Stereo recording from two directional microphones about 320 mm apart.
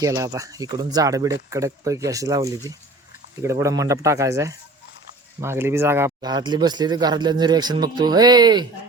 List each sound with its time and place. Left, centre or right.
0.0 s speech: centre